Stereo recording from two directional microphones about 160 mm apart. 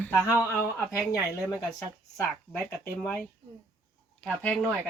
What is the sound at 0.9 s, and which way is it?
A woman's voice, 20° left (ahead or behind).